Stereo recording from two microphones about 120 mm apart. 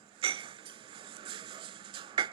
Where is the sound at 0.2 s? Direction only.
45° right (ahead or behind).